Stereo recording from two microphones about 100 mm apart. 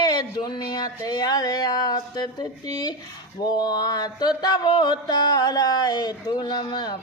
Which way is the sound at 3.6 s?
45° left (ahead or behind).